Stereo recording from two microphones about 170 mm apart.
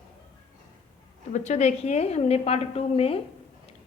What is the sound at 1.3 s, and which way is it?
A woman's voice, 40° left (ahead or behind).